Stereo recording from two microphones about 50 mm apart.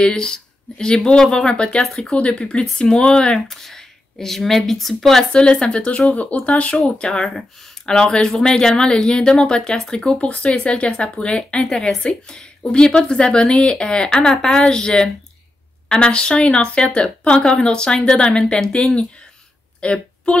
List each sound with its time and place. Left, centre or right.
0.0 s a woman's voice: centre
5.3 s speech: centre
6.7 s speech: centre
19.8 s a woman's voice: left